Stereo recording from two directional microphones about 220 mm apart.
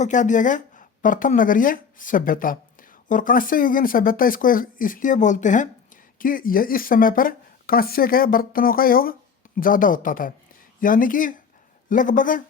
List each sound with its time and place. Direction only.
0.0 s speech: 35° left (ahead or behind)